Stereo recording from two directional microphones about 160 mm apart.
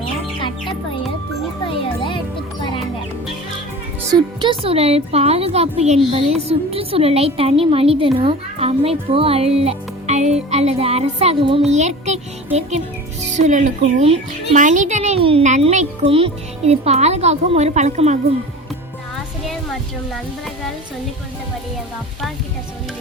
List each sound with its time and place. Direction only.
0.3 s music: 30° left (ahead or behind)
1.6 s jingle: 30° left (ahead or behind)
4.1 s speech: 30° right (ahead or behind); by 12.2 s 45° right (ahead or behind)
13.3 s a child's voice: 50° right (ahead or behind)